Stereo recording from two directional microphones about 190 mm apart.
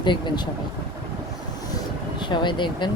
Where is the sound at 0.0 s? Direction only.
25° left (ahead or behind).